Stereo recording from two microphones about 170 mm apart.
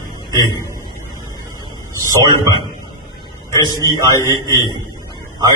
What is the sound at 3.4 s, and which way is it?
A man's voice, 25° left (ahead or behind).